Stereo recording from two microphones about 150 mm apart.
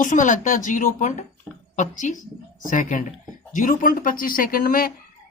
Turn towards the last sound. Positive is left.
turn(degrees=75)  # may be behind; listen again after turning